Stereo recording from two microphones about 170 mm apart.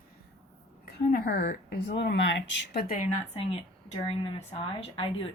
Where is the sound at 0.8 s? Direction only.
60° left (ahead or behind).